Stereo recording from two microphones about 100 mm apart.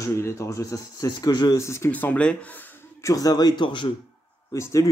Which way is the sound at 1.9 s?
15° left (ahead or behind).